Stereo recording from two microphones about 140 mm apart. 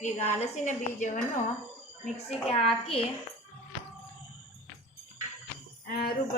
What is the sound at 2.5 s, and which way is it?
Speech, 40° left (ahead or behind).